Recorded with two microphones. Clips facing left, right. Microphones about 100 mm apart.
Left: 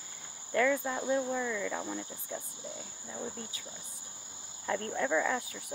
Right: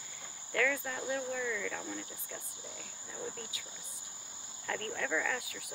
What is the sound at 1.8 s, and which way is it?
Cricket, 20° left (ahead or behind).